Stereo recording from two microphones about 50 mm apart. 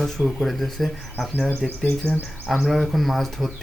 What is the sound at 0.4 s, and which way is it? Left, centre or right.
Speech, centre.